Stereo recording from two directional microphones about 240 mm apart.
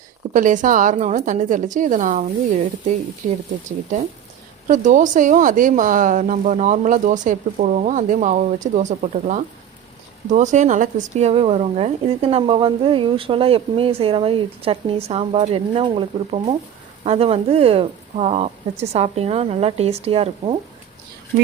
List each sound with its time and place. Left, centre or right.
0.3 s speech: right
4.7 s speech: right